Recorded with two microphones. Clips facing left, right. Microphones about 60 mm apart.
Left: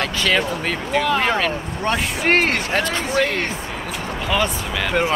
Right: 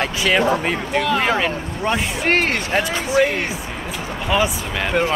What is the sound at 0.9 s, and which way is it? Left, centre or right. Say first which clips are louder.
Speech: left 1 dB; centre.